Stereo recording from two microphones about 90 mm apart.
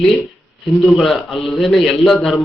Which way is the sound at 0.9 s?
Centre (ahead or behind).